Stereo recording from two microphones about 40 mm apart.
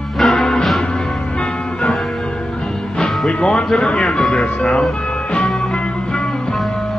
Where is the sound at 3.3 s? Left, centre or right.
Left.